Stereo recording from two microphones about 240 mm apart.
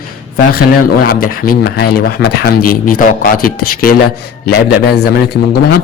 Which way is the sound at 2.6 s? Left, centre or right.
Left.